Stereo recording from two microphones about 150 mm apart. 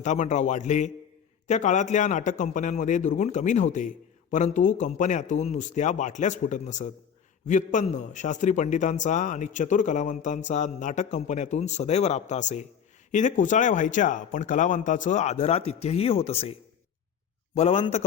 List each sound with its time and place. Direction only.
0.0 s a man's voice: 50° left (ahead or behind)